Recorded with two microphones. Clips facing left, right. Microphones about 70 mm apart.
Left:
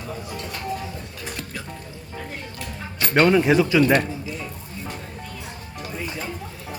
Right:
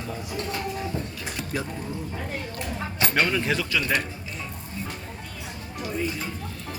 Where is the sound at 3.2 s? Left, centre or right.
Left.